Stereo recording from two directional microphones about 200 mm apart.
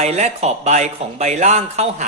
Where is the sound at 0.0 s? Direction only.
35° right (ahead or behind).